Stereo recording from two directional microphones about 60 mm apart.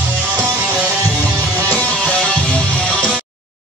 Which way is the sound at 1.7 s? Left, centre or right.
Centre.